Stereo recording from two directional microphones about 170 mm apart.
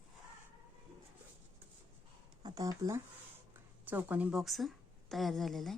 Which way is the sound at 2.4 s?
25° right (ahead or behind).